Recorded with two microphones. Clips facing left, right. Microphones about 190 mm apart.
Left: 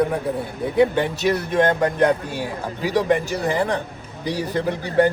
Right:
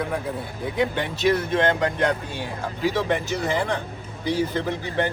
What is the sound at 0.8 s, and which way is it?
Speech, 45° left (ahead or behind).